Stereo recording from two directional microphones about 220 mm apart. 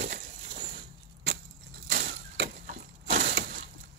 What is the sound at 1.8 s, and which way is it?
Splinter, 50° right (ahead or behind).